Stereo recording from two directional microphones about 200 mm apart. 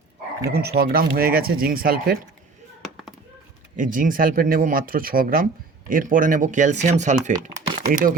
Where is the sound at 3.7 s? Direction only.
40° right (ahead or behind).